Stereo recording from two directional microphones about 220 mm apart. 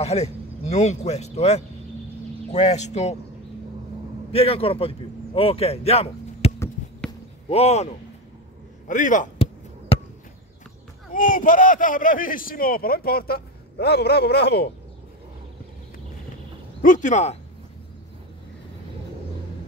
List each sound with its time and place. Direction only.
0.0 s a man's voice: 30° left (ahead or behind)
4.3 s a man's voice: 25° left (ahead or behind)
6.6 s a sound: 10° left (ahead or behind)
7.4 s speech: 30° left (ahead or behind)
8.8 s basketball bounce: 35° left (ahead or behind)
11.1 s a man's voice: 35° left (ahead or behind)
16.8 s speech: 35° left (ahead or behind)